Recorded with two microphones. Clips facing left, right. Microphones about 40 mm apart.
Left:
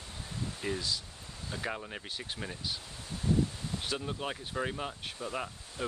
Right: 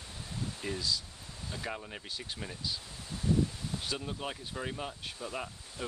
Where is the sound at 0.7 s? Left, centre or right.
Left.